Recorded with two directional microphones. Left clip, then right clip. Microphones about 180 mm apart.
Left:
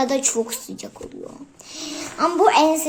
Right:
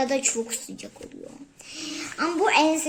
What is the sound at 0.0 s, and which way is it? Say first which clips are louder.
A woman's voice: left 4 dB; centre (ahead or behind).